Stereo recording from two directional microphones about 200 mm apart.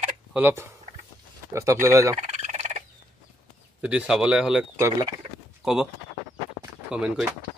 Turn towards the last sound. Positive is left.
turn(degrees=-5)  # may be behind; listen again after turning